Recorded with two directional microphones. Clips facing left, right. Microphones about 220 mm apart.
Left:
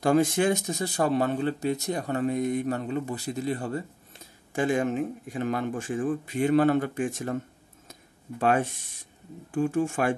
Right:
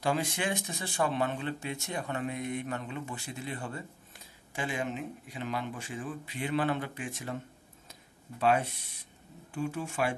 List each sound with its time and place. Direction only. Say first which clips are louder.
0.0 s speech: left 9 dB; 45° left (ahead or behind)
7.9 s a sound: left 8 dB; 50° left (ahead or behind)
9.5 s speech: left 9 dB; 50° left (ahead or behind)